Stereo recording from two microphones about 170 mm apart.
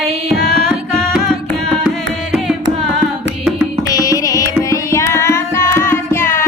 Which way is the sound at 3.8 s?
20° left (ahead or behind).